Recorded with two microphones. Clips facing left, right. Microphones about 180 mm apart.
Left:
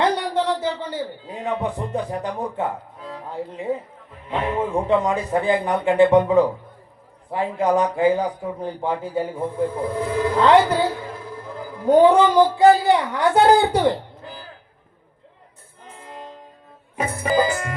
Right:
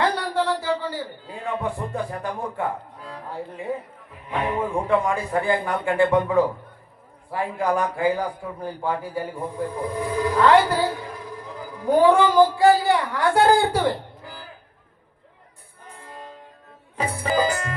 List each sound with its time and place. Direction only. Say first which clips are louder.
0.0 s a man's voice: left 2 dB; 20° left (ahead or behind)
11.9 s speech: left 3 dB; 20° left (ahead or behind)
17.0 s music: left 2 dB; 15° left (ahead or behind)